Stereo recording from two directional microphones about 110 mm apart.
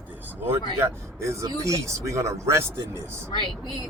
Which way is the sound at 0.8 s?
25° right (ahead or behind).